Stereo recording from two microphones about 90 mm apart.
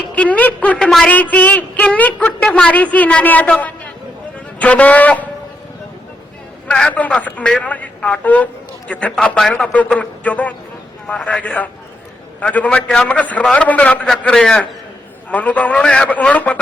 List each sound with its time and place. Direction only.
0.2 s a woman's voice: 15° left (ahead or behind)
0.8 s a sound: 5° left (ahead or behind)
1.1 s a woman's voice: 15° left (ahead or behind)
6.7 s a man's voice: 15° left (ahead or behind)
14.3 s a man's voice: 5° left (ahead or behind)
15.3 s a woman's voice: 15° left (ahead or behind)